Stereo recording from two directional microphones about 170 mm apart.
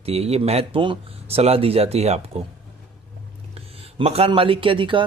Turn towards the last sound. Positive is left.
turn(degrees=-30)  # may be behind; listen again after turning